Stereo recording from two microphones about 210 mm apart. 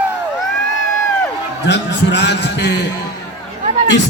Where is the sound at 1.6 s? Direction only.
55° left (ahead or behind).